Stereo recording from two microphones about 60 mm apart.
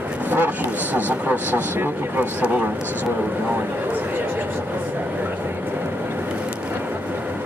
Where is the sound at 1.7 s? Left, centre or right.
Right.